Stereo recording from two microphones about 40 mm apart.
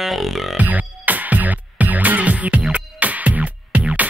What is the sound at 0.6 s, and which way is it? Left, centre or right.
Music, right.